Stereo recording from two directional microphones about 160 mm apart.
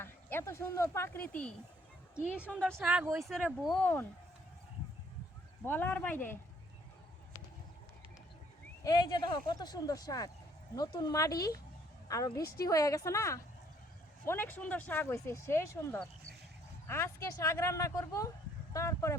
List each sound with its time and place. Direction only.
0.0 s speech: 15° left (ahead or behind)
2.6 s speech: 10° right (ahead or behind)
3.2 s speech: centre (ahead or behind)
3.8 s speech: 10° left (ahead or behind)
5.6 s speech: 10° left (ahead or behind)
8.8 s speech: 25° left (ahead or behind)
12.4 s a woman's voice: 75° left (ahead or behind)
12.6 s speech: 20° left (ahead or behind)